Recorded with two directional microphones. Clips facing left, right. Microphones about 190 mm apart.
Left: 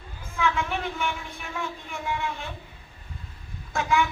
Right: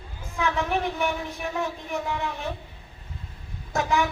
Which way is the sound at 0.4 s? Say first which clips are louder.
Right 2 dB; 40° right (ahead or behind).